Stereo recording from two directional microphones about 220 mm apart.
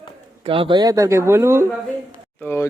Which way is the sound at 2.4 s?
10° left (ahead or behind).